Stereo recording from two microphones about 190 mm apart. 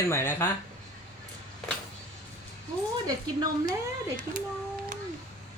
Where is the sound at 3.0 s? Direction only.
20° right (ahead or behind).